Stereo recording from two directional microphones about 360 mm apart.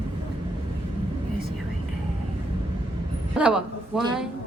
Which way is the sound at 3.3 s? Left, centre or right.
Centre.